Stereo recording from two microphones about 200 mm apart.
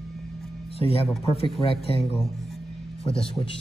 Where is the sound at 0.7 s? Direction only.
30° left (ahead or behind).